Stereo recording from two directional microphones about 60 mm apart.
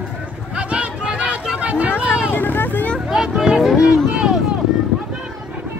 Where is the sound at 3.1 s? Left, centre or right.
Centre.